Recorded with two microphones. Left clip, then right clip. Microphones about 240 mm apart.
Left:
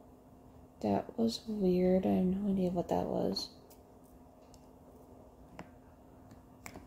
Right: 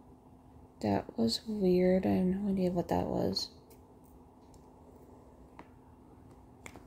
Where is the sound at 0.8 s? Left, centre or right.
Right.